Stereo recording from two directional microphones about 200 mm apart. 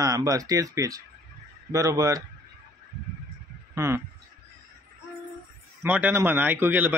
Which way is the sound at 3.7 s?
15° right (ahead or behind).